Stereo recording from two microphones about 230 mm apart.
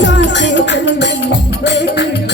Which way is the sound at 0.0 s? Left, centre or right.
Left.